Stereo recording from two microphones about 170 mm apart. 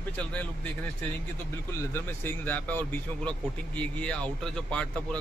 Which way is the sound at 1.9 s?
15° left (ahead or behind).